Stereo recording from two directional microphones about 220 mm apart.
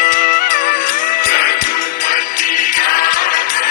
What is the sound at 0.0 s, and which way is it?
Music, 40° left (ahead or behind).